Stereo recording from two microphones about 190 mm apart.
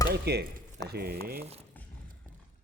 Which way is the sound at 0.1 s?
55° right (ahead or behind).